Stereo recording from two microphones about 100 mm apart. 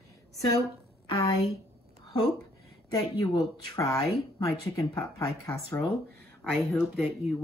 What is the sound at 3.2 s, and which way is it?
Speech, 35° left (ahead or behind).